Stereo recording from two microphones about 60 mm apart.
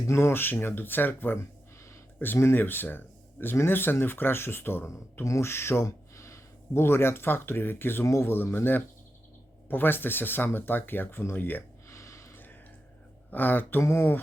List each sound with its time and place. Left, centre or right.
0.1 s speech: left
5.2 s speech: left
11.9 s a sound: left
12.3 s a sound: left
13.3 s speech: left
13.8 s speech: left